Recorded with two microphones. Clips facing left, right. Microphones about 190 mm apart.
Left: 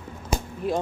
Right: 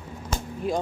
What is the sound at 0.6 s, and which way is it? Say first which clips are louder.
Speech: left 1 dB; centre (ahead or behind).